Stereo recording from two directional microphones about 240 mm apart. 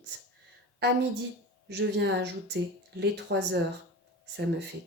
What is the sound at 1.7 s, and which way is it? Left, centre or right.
Speech, right.